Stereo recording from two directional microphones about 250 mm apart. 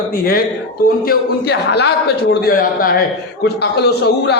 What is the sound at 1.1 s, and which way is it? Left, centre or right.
Speech, left.